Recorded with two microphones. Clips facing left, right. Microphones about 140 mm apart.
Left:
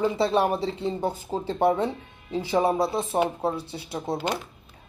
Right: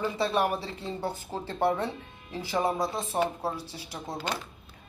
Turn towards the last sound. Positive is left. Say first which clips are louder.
# left 6 dB
turn(degrees=15)  # may be behind; listen again after turning